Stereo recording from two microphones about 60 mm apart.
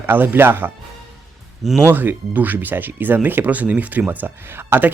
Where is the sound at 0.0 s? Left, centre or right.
Right.